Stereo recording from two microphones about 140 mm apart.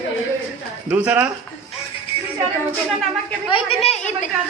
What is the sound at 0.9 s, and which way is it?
Speech, 10° right (ahead or behind).